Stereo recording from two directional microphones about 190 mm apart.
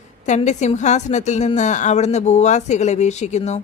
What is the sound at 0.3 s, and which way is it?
A woman's voice, 40° left (ahead or behind).